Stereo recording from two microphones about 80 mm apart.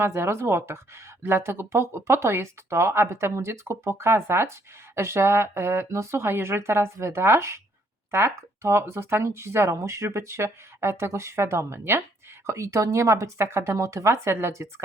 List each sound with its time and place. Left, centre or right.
0.0 s speech: right